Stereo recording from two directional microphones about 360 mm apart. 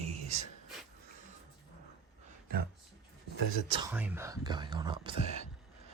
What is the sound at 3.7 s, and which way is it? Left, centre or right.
Speech, centre.